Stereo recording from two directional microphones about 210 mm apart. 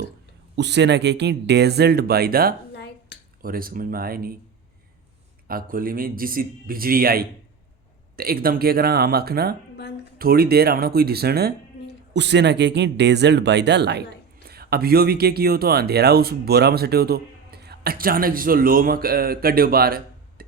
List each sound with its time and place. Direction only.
0.5 s speech: 55° right (ahead or behind)
2.7 s a sound: 55° left (ahead or behind)
3.4 s speech: 45° right (ahead or behind)
5.5 s speech: 45° right (ahead or behind)